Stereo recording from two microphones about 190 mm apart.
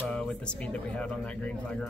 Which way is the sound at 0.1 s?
5° left (ahead or behind).